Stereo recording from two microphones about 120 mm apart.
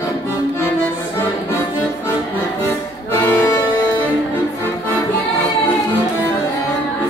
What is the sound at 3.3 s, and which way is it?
Music, 15° left (ahead or behind).